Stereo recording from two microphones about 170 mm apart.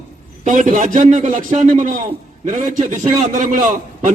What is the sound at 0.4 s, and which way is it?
A man's voice, 45° right (ahead or behind).